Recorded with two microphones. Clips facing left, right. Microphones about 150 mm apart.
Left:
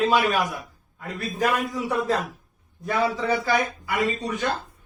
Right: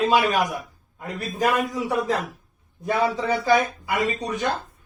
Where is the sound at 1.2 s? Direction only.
15° right (ahead or behind).